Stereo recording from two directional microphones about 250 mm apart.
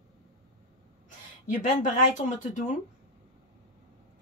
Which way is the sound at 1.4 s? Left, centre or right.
Left.